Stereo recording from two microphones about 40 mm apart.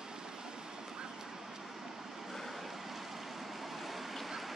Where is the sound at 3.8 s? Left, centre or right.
Centre.